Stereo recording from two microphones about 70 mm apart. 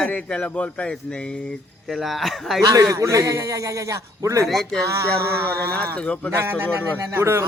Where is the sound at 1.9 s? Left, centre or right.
Centre.